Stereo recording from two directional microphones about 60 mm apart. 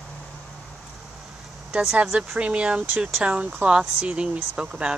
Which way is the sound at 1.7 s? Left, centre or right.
Centre.